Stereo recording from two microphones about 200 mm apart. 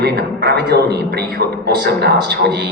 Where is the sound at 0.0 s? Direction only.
55° right (ahead or behind).